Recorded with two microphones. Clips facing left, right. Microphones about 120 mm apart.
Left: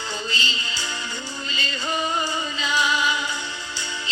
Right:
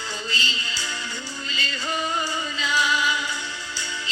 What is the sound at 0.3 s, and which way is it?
Music, 20° left (ahead or behind).